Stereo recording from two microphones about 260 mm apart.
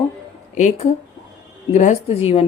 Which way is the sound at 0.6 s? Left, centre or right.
Left.